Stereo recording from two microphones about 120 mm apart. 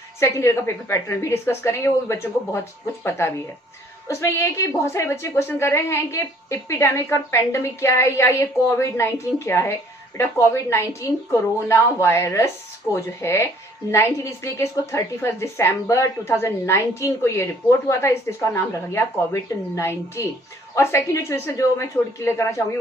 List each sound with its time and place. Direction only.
0.2 s speech: 25° left (ahead or behind)